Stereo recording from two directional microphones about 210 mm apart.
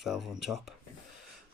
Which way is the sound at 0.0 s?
Centre (ahead or behind).